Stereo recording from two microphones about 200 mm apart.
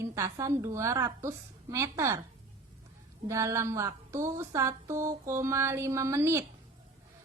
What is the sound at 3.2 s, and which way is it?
A woman's voice, 15° right (ahead or behind).